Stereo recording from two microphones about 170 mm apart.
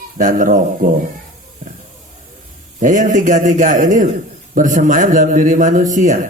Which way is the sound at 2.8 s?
50° right (ahead or behind).